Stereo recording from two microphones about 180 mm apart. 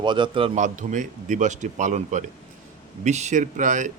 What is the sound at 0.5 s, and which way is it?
Speech, 45° right (ahead or behind).